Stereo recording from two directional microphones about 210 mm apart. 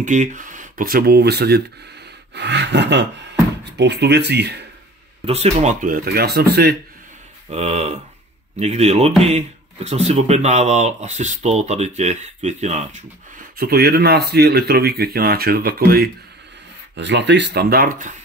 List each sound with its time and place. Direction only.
0.0 s speech: 35° right (ahead or behind); by 4.6 s 55° right (ahead or behind)
5.2 s speech: 30° right (ahead or behind); by 6.8 s 50° right (ahead or behind)
7.5 s speech: 30° right (ahead or behind); by 16.1 s 45° right (ahead or behind)
16.9 s speech: 55° right (ahead or behind); by 18.1 s 40° right (ahead or behind)